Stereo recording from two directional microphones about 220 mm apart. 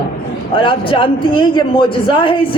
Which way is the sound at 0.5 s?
25° left (ahead or behind).